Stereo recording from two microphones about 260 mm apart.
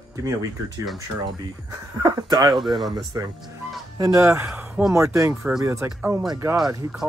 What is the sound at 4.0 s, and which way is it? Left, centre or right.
Speech, centre.